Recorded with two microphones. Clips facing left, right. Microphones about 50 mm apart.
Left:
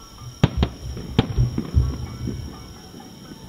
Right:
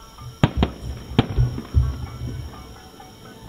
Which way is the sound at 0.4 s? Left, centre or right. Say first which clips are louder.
Right 2 dB; centre.